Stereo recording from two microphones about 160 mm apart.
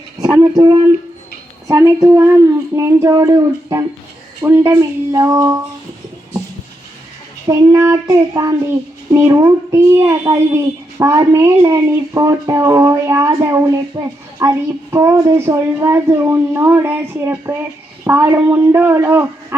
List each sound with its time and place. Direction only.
0.5 s a child's voice: 25° right (ahead or behind)
7.4 s a child's voice: 20° right (ahead or behind)